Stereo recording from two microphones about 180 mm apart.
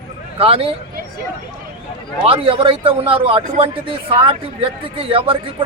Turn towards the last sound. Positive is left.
turn(degrees=-30)  # may be behind; listen again after turning